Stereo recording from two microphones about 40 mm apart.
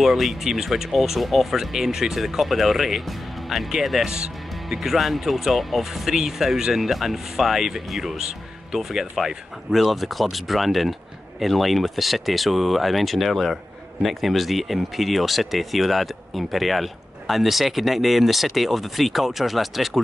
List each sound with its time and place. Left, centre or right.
0.0 s speech: centre
4.1 s music: centre
4.7 s speech: centre